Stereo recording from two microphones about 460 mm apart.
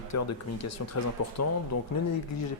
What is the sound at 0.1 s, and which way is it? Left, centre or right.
Speech, left.